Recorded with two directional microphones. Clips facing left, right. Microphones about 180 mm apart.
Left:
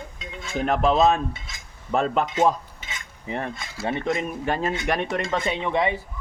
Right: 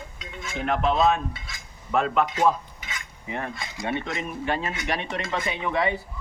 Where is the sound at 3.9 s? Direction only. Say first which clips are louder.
Left 4 dB; 40° left (ahead or behind).